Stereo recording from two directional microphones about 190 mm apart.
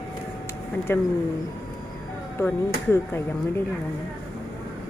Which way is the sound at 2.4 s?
15° left (ahead or behind).